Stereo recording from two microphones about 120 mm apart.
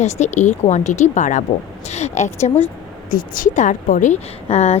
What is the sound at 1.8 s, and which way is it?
Speech, 65° left (ahead or behind).